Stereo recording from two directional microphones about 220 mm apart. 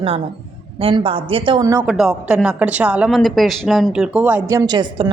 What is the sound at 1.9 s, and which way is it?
A woman's voice, 5° right (ahead or behind).